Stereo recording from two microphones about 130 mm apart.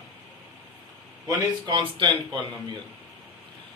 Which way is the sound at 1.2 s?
35° right (ahead or behind).